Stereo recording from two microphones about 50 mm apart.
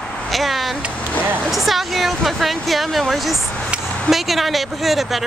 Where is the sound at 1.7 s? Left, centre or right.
Centre.